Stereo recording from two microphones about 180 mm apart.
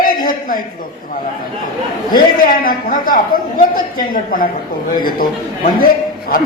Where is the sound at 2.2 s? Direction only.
55° left (ahead or behind).